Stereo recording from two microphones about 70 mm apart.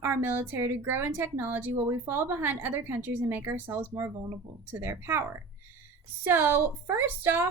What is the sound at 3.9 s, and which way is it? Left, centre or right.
A woman's voice, right.